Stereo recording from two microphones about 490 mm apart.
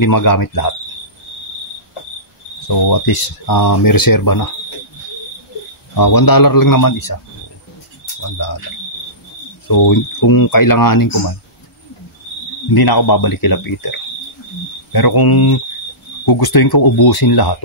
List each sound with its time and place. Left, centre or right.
0.0 s speech: left
2.7 s speech: left
5.9 s speech: left
9.7 s speech: left
12.7 s speech: left